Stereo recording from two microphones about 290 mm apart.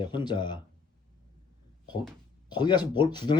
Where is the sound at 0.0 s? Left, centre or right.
Centre.